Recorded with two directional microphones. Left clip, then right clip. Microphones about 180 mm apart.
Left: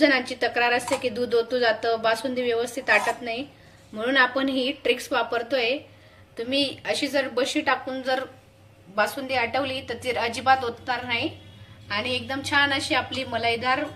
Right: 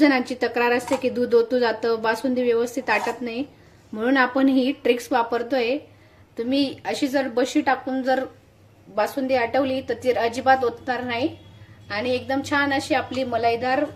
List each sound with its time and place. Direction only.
0.0 s speech: 45° right (ahead or behind)